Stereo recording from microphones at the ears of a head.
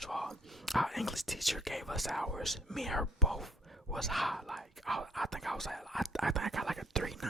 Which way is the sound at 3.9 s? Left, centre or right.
Centre.